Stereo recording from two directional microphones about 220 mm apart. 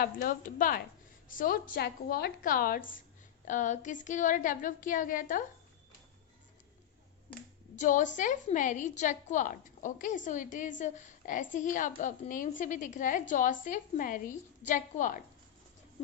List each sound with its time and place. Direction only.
0.0 s a woman's voice: 40° left (ahead or behind)
7.8 s a woman's voice: 35° left (ahead or behind)